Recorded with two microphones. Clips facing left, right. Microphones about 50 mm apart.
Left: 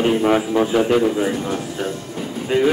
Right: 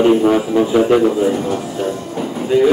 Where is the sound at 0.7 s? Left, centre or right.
Centre.